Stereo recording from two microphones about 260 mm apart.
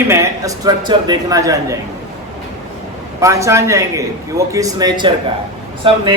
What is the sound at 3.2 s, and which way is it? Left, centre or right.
A man's voice, centre.